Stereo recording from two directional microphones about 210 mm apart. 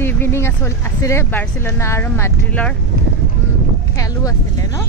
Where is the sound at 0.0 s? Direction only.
10° left (ahead or behind).